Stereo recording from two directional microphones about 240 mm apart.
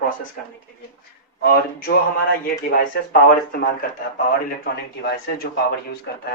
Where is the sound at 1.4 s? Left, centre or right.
Left.